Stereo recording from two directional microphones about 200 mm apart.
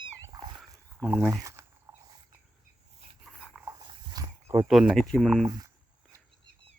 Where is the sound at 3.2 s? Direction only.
Centre (ahead or behind).